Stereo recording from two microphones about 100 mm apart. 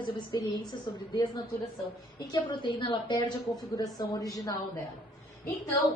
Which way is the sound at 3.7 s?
35° left (ahead or behind).